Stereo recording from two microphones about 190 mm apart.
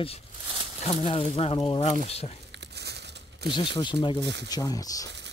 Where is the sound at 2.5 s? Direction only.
65° right (ahead or behind).